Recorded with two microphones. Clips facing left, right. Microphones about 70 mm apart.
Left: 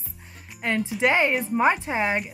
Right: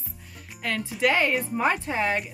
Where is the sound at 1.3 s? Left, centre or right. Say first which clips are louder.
Left 3 dB; centre.